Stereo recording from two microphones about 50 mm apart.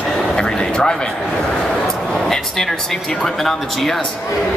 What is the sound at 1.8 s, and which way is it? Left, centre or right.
Vehicle, centre.